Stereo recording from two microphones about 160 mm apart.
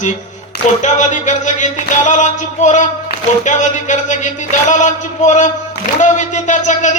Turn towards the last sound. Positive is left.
turn(degrees=50)  # may be behind; listen again after turning